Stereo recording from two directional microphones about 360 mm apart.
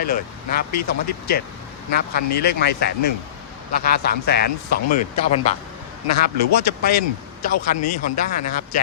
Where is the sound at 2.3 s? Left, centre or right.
Left.